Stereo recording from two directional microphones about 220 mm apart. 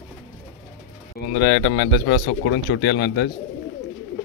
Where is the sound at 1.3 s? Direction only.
50° left (ahead or behind).